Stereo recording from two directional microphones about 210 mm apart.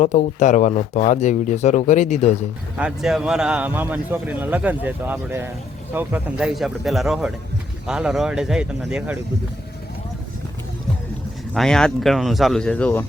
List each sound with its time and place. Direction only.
0.0 s speech: 35° left (ahead or behind)
2.7 s speech: 5° right (ahead or behind)
11.5 s speech: 5° left (ahead or behind)